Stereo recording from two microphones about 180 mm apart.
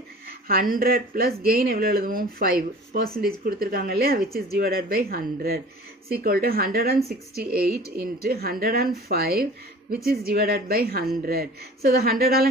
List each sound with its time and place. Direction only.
0.5 s speech: 55° right (ahead or behind)
8.0 s speech: 60° right (ahead or behind)